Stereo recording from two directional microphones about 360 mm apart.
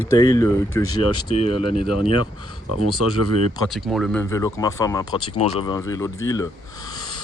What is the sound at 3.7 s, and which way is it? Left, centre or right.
Speech, centre.